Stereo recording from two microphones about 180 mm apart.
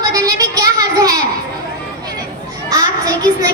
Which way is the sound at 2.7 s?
20° right (ahead or behind).